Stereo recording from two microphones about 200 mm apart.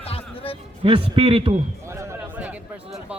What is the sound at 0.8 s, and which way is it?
Speech, 25° right (ahead or behind).